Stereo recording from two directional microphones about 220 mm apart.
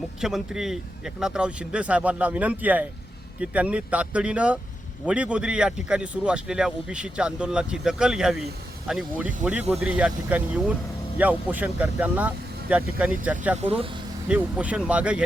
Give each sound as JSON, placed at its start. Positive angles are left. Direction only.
{"t": 0.2, "sound": "speech", "side_deg": 0}
{"t": 13.6, "sound": "speech", "side_deg": -25}
{"t": 14.3, "sound": "speech", "side_deg": -5}